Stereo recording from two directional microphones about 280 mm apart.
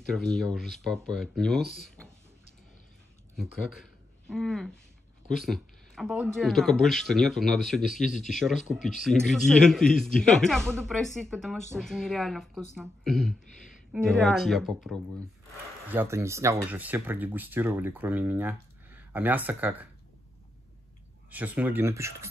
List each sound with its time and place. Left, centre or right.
0.1 s speech: centre
4.3 s speech: centre
21.3 s speech: centre